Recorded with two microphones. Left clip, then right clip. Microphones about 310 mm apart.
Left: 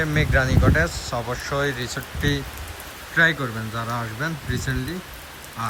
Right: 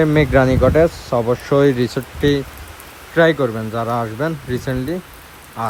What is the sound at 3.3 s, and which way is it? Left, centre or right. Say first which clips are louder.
Speech: right 9 dB; right.